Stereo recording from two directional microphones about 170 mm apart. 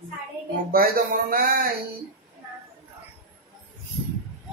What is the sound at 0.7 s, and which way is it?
Speech, 60° right (ahead or behind).